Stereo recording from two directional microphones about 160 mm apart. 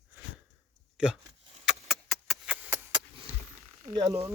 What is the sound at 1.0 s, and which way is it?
Speech, 5° right (ahead or behind).